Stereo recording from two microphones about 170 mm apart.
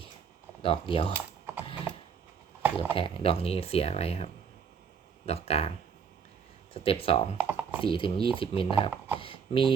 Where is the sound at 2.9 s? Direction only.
35° left (ahead or behind).